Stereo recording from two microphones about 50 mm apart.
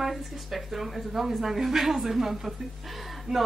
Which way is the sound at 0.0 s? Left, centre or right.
Centre.